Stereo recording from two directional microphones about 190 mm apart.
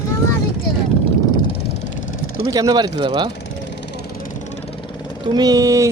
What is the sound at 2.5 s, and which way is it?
Speech, 20° right (ahead or behind).